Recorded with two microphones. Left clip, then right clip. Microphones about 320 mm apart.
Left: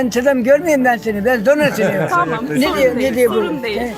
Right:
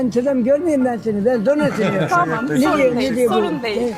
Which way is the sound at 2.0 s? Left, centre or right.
Centre.